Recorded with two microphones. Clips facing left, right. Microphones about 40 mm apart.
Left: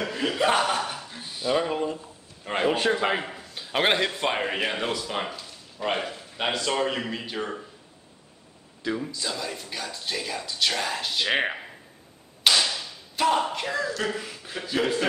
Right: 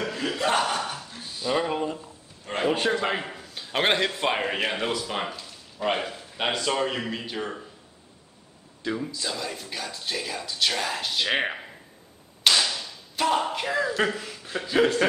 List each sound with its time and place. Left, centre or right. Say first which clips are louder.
0.0 s a sound: left 2 dB; centre
1.5 s speech: left 1 dB; centre
2.4 s a sound: left 2 dB; centre
2.7 s a man's voice: even; centre
8.8 s speech: even; centre
12.4 s whip: even; centre
14.1 s speech: right 1 dB; centre